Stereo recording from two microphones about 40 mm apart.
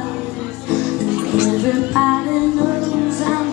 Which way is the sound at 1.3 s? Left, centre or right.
Right.